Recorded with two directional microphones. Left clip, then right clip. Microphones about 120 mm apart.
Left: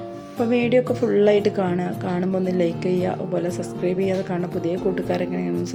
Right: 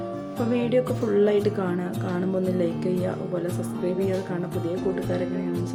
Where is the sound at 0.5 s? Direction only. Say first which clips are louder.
Left 4 dB; 20° left (ahead or behind).